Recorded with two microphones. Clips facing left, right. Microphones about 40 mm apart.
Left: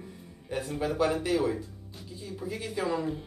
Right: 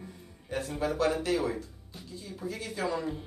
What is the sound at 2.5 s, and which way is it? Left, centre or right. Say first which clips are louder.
Speech: left 2 dB; centre.